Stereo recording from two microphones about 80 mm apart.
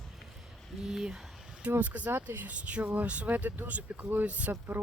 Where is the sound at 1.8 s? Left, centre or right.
Centre.